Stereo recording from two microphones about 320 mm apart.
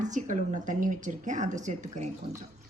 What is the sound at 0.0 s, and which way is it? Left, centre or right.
Speech, right.